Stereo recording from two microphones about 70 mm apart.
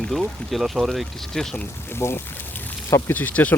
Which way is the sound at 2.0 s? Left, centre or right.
Left.